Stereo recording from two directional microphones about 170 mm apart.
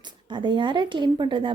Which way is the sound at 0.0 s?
25° right (ahead or behind).